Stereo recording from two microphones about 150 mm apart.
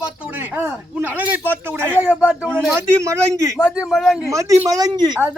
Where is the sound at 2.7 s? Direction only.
20° right (ahead or behind).